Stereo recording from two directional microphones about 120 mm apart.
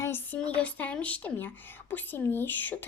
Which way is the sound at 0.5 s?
10° left (ahead or behind).